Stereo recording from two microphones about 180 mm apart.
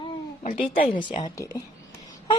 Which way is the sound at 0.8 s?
25° left (ahead or behind).